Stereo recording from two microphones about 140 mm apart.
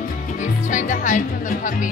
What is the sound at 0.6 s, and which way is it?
Music, 65° left (ahead or behind).